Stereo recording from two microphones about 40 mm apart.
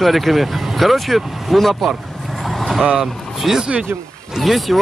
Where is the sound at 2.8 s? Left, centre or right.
Right.